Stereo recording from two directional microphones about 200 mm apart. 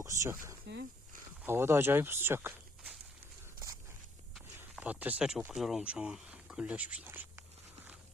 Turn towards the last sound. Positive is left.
turn(degrees=-10)  # may be behind; listen again after turning